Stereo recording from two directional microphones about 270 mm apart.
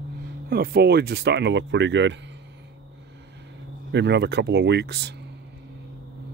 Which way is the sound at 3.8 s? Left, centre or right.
Right.